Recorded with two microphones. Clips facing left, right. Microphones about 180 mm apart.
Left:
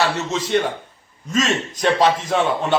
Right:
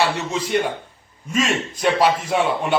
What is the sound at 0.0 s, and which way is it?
A man's voice, 15° right (ahead or behind).